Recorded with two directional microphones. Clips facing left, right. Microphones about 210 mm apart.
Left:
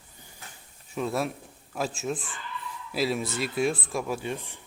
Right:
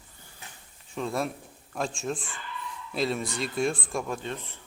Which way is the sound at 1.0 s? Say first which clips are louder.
Left 1 dB; 5° left (ahead or behind).